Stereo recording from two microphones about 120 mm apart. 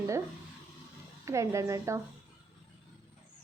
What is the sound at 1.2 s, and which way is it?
Speech, 25° right (ahead or behind).